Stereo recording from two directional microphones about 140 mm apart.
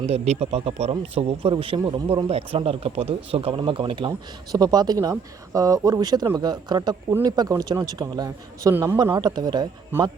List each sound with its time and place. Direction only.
0.0 s a man's voice: 50° right (ahead or behind); by 9.0 s 15° right (ahead or behind)
9.1 s speech: 30° right (ahead or behind)
9.9 s a man's voice: 15° right (ahead or behind)